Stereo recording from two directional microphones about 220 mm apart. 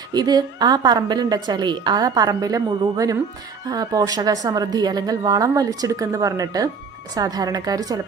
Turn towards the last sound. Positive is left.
turn(degrees=-15)  # may be behind; listen again after turning